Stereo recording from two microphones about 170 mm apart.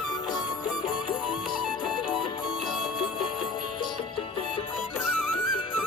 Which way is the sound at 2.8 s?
5° right (ahead or behind).